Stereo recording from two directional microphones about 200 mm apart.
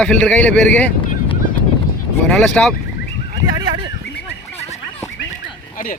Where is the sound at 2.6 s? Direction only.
5° left (ahead or behind).